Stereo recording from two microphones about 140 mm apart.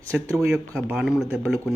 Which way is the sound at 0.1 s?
10° right (ahead or behind).